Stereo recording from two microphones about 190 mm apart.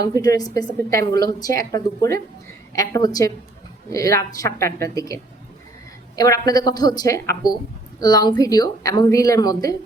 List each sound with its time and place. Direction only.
0.0 s a woman's voice: 20° left (ahead or behind)